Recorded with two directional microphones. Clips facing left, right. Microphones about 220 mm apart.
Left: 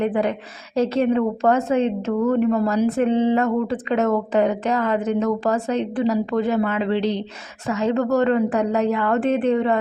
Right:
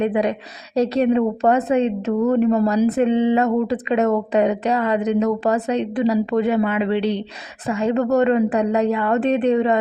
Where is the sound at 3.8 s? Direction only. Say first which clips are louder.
Right 2 dB; 15° right (ahead or behind).